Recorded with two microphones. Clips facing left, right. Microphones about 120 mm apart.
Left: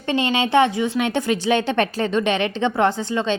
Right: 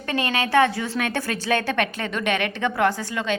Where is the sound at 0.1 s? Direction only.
20° left (ahead or behind).